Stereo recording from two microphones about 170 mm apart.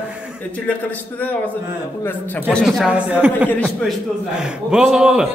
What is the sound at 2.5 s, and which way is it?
A man's voice, centre (ahead or behind).